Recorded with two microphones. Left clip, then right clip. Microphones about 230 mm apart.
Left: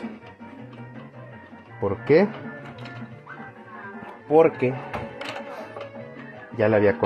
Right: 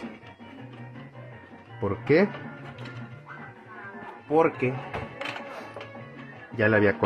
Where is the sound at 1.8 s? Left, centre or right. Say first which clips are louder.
Left 4 dB; centre.